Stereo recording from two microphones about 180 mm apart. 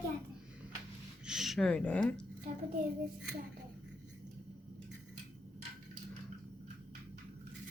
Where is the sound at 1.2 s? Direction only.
Centre (ahead or behind).